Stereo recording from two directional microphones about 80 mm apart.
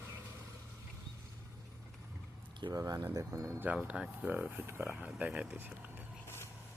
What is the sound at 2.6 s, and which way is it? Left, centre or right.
Speech, right.